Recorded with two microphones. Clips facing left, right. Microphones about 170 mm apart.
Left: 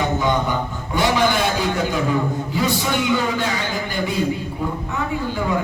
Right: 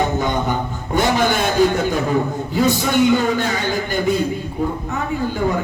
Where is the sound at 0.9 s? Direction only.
50° right (ahead or behind).